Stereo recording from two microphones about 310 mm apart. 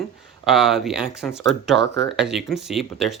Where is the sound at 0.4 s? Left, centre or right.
Centre.